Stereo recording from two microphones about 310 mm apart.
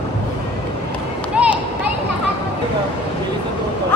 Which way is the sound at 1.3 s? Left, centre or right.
Centre.